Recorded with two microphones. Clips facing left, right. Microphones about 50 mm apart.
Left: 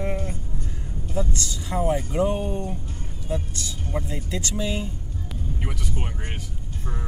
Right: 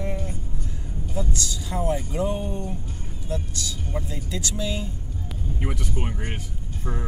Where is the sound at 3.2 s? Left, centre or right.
Centre.